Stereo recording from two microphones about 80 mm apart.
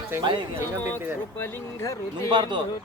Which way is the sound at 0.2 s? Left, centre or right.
Right.